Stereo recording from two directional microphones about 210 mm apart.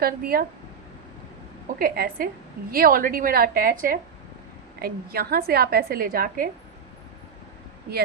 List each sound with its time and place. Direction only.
0.0 s a woman's voice: 45° right (ahead or behind)
1.8 s a woman's voice: 45° right (ahead or behind)